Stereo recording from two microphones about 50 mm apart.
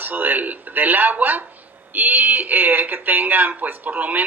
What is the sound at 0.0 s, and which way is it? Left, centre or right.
Speech, right.